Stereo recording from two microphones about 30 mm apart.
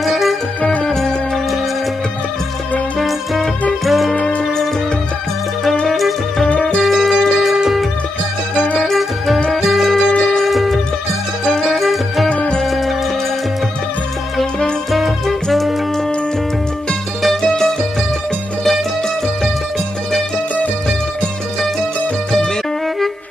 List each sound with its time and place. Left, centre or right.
0.0 s music: centre
3.0 s music: centre
5.9 s music: centre
9.5 s music: centre
12.3 s music: left
12.6 s music: centre
14.9 s music: centre